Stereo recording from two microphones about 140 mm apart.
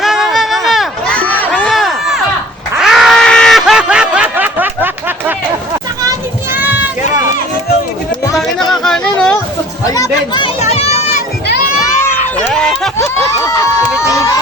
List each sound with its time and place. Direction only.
0.0 s run: centre (ahead or behind)
1.6 s crowd: centre (ahead or behind)
2.7 s snicker: centre (ahead or behind)
6.5 s run: 15° right (ahead or behind)
8.4 s a sound: 5° left (ahead or behind)
9.8 s chatter: 25° left (ahead or behind)
10.6 s a sound: 50° left (ahead or behind)
12.5 s a sound: 5° left (ahead or behind)
13.0 s crowd: 25° left (ahead or behind)